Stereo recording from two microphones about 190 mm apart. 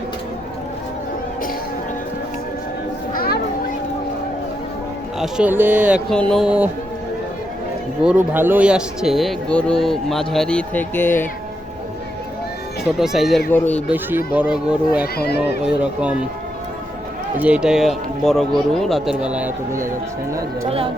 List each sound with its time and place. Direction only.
3.1 s children playing: 50° left (ahead or behind)
5.2 s speech: 10° right (ahead or behind)
8.0 s speech: 10° right (ahead or behind); by 11.3 s 10° left (ahead or behind)
13.0 s speech: centre (ahead or behind)
14.3 s speech: 5° right (ahead or behind)
15.0 s speech: 55° left (ahead or behind)
15.6 s speech: 5° right (ahead or behind)
17.4 s speech: 5° right (ahead or behind)